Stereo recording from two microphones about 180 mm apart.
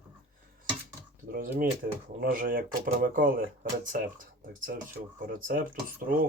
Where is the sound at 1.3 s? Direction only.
55° right (ahead or behind).